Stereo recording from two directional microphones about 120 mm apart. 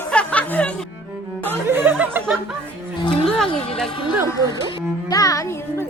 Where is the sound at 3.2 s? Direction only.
5° left (ahead or behind).